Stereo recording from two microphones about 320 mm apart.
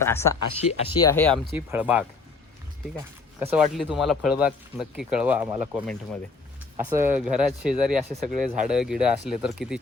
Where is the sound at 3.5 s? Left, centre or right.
Centre.